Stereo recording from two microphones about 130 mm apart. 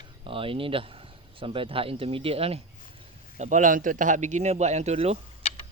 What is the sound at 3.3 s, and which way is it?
A man's voice, 75° right (ahead or behind).